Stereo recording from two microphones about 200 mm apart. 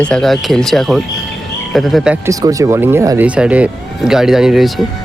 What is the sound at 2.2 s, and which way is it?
Speech, 15° right (ahead or behind).